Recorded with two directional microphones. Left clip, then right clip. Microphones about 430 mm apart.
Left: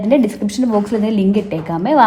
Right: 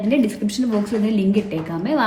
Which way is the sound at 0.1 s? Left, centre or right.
Centre.